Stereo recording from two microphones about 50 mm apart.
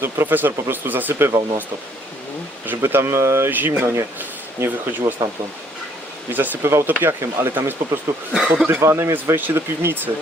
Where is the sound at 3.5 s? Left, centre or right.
Right.